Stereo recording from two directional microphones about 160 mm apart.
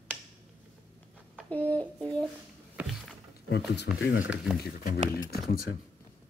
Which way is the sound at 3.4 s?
90° left.